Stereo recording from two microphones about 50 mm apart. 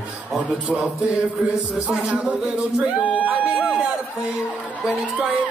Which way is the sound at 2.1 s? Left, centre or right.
Right.